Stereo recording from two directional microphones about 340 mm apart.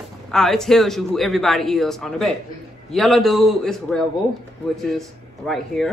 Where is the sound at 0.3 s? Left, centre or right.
Centre.